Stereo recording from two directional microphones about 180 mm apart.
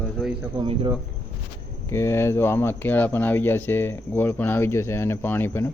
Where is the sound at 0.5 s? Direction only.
25° right (ahead or behind).